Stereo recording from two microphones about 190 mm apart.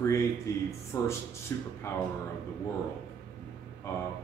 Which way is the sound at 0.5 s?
15° left (ahead or behind).